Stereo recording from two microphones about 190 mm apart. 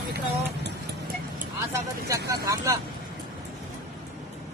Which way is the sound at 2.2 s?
15° right (ahead or behind).